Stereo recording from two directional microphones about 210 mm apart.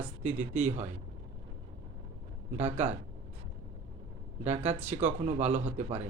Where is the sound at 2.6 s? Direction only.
35° right (ahead or behind).